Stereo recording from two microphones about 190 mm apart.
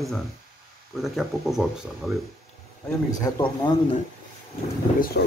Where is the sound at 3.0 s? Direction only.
20° left (ahead or behind).